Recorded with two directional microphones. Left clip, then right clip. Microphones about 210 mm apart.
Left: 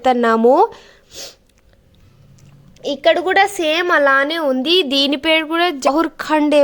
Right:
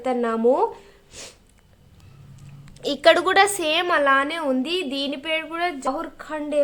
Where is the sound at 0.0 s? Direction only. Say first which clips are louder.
Left 8 dB; 40° left (ahead or behind).